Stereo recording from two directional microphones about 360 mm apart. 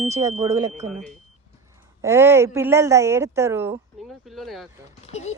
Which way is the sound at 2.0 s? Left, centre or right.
Centre.